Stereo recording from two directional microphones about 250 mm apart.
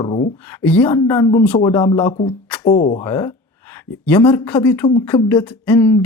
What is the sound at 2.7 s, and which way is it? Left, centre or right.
Speech, left.